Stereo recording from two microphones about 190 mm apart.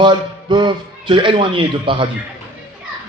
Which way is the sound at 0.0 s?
25° right (ahead or behind).